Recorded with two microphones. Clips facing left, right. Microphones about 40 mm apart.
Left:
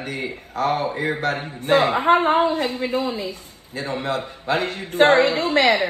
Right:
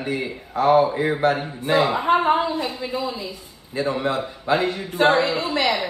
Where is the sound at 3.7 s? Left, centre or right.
Right.